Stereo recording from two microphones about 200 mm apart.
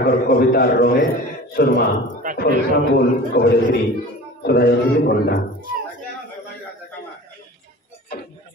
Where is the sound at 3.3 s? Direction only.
50° left (ahead or behind).